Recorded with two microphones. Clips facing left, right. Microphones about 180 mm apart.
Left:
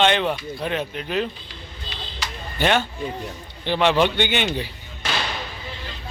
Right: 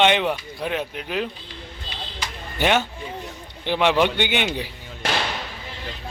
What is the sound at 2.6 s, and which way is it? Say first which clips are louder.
Speech: even; 10° right (ahead or behind).